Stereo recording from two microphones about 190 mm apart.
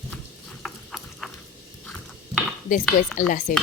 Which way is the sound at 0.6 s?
Centre (ahead or behind).